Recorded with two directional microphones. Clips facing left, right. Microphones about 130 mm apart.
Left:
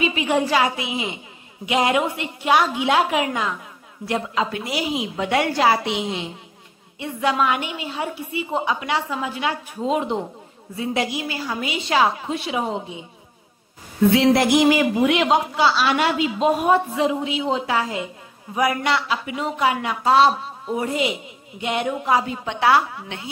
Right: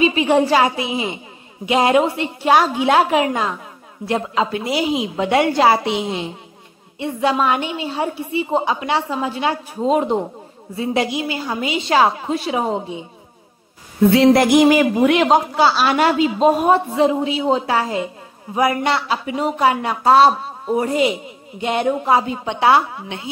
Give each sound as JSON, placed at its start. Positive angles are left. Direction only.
{"t": 0.0, "sound": "a woman's voice", "side_deg": -30}
{"t": 10.8, "sound": "a woman's voice", "side_deg": -30}
{"t": 11.9, "sound": "a woman's voice", "side_deg": -40}
{"t": 14.1, "sound": "a woman's voice", "side_deg": -50}